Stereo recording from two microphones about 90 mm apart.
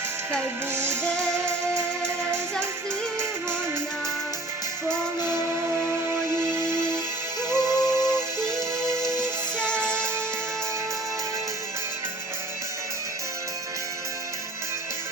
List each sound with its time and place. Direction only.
0.7 s music: 30° right (ahead or behind)
1.0 s music: 10° left (ahead or behind)
1.5 s music: 30° right (ahead or behind)
5.8 s music: 30° right (ahead or behind)